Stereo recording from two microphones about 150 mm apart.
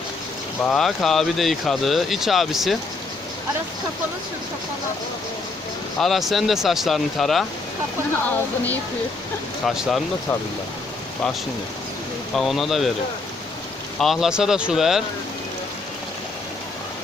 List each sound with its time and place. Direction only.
0.6 s speech: 5° left (ahead or behind)
6.0 s speech: centre (ahead or behind)
9.6 s speech: centre (ahead or behind)
12.4 s speech: centre (ahead or behind)
14.0 s speech: centre (ahead or behind)